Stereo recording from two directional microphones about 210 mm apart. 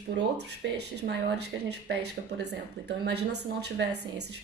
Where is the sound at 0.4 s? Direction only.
55° right (ahead or behind).